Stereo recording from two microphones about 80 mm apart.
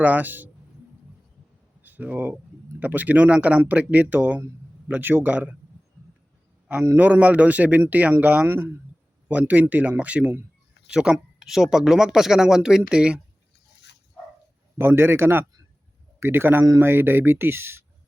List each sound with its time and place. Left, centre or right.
0.0 s a man's voice: right
1.8 s a man's voice: right
6.7 s a man's voice: right
8.4 s speech: right
9.3 s a man's voice: centre
14.8 s a man's voice: right